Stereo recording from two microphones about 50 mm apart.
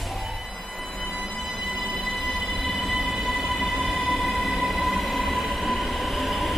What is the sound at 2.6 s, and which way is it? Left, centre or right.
Train, centre.